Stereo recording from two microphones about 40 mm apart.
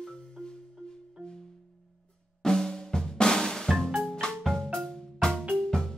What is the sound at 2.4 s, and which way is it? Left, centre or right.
Drum, centre.